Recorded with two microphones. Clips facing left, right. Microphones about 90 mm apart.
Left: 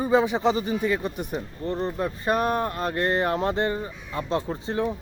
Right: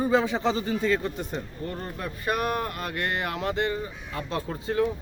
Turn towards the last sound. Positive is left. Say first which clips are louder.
# right 1 dB
turn(degrees=25)  # may be behind; listen again after turning